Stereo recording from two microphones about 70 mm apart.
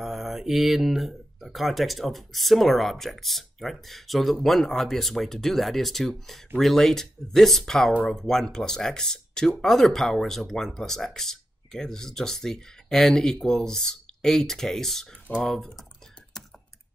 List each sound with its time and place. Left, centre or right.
0.0 s speech: centre